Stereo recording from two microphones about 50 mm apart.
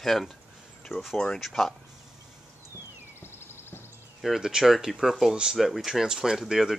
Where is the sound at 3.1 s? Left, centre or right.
Left.